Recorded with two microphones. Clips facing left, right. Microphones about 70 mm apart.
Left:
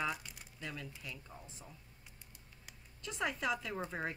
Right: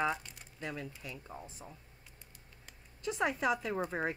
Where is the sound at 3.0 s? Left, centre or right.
Centre.